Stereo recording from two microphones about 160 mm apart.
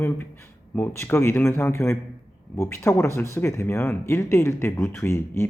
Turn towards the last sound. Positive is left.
turn(degrees=15)  # may be behind; listen again after turning